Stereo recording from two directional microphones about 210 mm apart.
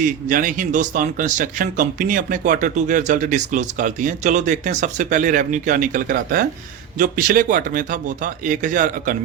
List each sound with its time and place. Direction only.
0.0 s speech: 40° right (ahead or behind)